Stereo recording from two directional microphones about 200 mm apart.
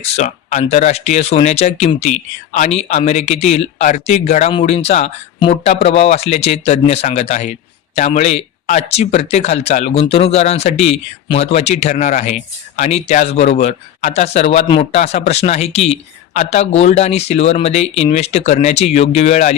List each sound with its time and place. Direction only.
0.0 s speech: 35° left (ahead or behind)